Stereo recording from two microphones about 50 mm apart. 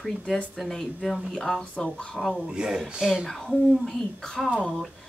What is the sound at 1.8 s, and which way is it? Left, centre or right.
Speech, centre.